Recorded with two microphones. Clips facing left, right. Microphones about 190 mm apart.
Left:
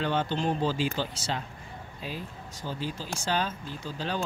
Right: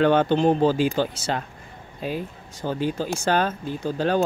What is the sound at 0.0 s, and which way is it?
Speech, 60° right (ahead or behind).